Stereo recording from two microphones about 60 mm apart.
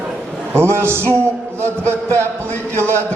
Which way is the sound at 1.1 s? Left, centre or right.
Right.